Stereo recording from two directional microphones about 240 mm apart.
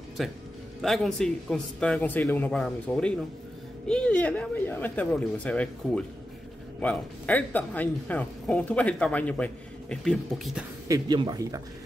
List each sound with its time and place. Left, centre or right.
0.2 s a man's voice: centre
10.9 s speech: centre